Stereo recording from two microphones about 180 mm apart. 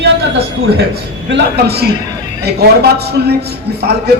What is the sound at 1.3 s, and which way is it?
A man's voice, 70° right (ahead or behind).